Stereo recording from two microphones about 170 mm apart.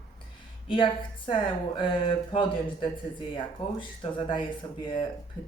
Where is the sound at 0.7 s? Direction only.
30° left (ahead or behind).